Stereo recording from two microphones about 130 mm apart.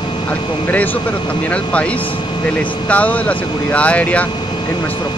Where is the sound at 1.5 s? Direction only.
10° left (ahead or behind).